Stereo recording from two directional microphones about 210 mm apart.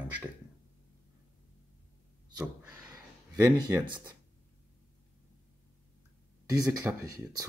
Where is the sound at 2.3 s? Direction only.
10° right (ahead or behind).